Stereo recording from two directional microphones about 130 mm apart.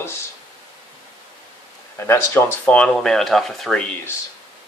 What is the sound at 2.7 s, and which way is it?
Speech, 10° left (ahead or behind).